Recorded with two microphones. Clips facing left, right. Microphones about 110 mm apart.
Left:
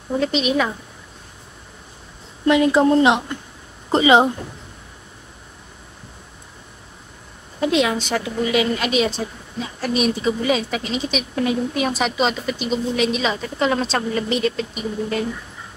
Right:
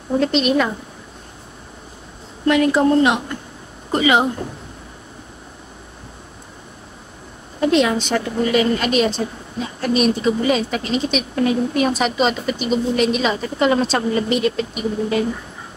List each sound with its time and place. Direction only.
0.2 s a woman's voice: 5° left (ahead or behind)
2.4 s a woman's voice: 20° left (ahead or behind)
7.6 s a woman's voice: 5° left (ahead or behind)